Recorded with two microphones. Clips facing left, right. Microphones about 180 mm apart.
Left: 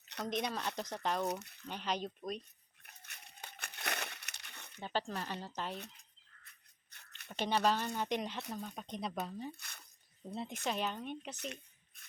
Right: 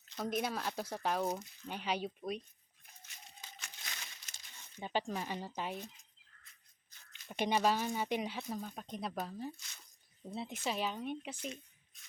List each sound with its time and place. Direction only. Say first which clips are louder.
0.3 s speech: right 1 dB; 5° right (ahead or behind)
1.3 s speech: even; 70° left (ahead or behind)
1.6 s speech: right 1 dB; 10° right (ahead or behind)
2.8 s a sound: even; 65° left (ahead or behind)
4.8 s speech: right 1 dB; 15° right (ahead or behind)
5.8 s a sound: right 3 dB; 65° left (ahead or behind)
7.3 s speech: right 1 dB; 15° right (ahead or behind)
9.6 s speech: left 4 dB; 60° left (ahead or behind)
10.2 s speech: even; 5° right (ahead or behind)
11.3 s speech: right 1 dB; 65° left (ahead or behind)